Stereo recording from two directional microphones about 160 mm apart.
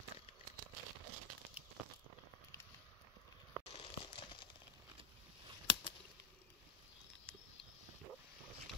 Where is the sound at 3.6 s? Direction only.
35° left (ahead or behind).